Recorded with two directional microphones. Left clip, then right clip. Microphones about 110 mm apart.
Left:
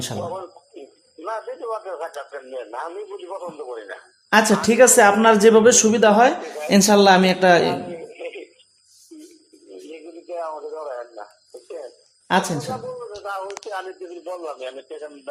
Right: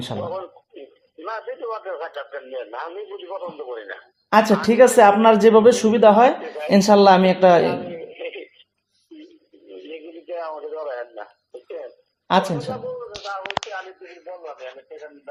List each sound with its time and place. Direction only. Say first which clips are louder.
0.0 s speech: right 1 dB; 5° left (ahead or behind)
9.9 s radio: right 1 dB; centre (ahead or behind)
12.3 s speech: right 1 dB; centre (ahead or behind)
14.4 s a man's voice: left 4 dB; 90° left